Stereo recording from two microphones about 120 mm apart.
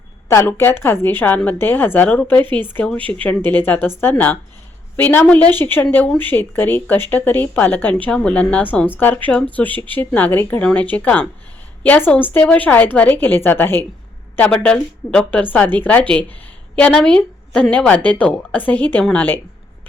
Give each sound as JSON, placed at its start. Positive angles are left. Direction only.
{"t": 0.3, "sound": "a woman's voice", "side_deg": 20}